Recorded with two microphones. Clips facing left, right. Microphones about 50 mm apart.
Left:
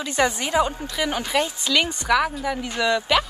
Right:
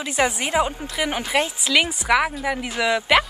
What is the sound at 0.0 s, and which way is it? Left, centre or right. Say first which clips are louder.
Speech: even; centre.